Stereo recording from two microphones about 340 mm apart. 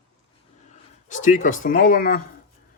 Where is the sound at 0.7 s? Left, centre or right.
Left.